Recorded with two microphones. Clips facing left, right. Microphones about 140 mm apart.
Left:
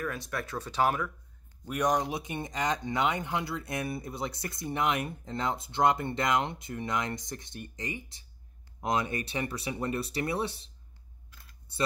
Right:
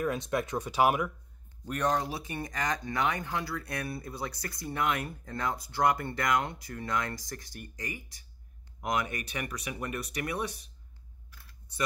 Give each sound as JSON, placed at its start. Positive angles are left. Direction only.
{"t": 0.0, "sound": "speech", "side_deg": -20}
{"t": 1.7, "sound": "speech", "side_deg": 15}
{"t": 11.3, "sound": "computer keyboard", "side_deg": 30}